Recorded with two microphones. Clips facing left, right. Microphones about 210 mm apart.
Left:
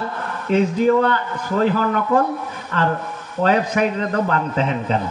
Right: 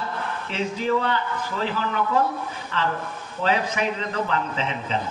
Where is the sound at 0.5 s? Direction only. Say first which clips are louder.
Left 9 dB; 50° left (ahead or behind).